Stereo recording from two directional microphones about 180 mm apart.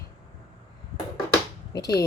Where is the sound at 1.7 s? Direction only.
20° left (ahead or behind).